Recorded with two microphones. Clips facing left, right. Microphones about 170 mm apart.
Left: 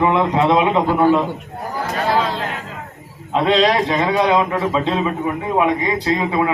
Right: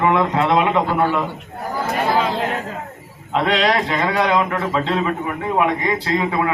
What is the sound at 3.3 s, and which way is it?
A man's voice, 20° left (ahead or behind).